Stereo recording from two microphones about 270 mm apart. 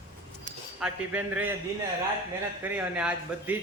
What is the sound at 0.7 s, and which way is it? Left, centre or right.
Speech, centre.